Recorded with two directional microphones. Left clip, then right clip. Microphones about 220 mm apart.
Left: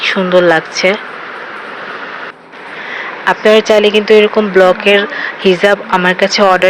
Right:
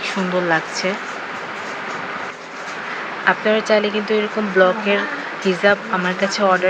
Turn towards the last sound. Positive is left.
turn(degrees=15)  # may be behind; listen again after turning